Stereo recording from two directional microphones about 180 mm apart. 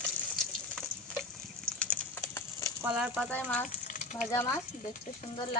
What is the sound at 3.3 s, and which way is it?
Speech, 10° left (ahead or behind).